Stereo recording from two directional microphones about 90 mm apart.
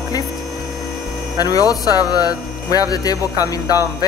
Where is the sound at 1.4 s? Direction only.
45° left (ahead or behind).